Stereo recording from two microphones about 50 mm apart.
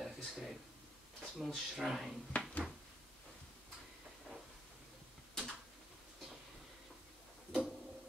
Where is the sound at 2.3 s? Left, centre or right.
Left.